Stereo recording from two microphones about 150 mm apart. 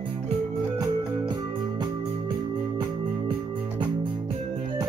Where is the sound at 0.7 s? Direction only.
30° right (ahead or behind).